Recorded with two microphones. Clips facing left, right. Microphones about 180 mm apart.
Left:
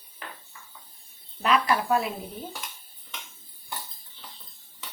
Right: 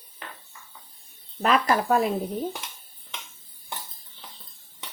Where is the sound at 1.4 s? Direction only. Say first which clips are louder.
Right 2 dB; 45° right (ahead or behind).